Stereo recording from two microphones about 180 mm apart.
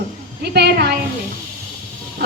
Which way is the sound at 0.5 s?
65° right (ahead or behind).